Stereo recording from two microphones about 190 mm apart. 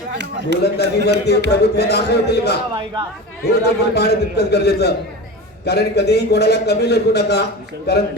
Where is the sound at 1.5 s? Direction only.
60° left (ahead or behind).